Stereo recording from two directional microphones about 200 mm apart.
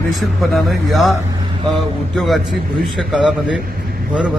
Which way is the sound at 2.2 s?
Centre (ahead or behind).